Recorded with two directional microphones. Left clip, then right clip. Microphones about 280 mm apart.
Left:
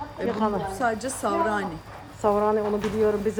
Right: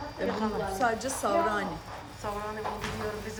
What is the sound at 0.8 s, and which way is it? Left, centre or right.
Speech, left.